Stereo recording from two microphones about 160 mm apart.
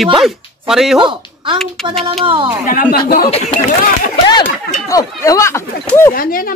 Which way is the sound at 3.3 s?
50° left (ahead or behind).